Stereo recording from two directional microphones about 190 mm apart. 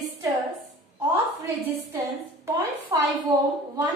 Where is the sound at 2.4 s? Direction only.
20° right (ahead or behind).